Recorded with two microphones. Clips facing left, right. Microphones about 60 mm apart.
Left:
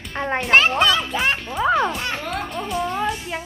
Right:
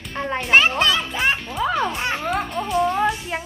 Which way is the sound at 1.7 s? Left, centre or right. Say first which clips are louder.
Left 4 dB; left.